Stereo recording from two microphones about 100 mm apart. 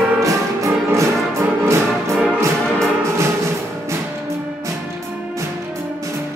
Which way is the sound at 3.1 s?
30° right (ahead or behind).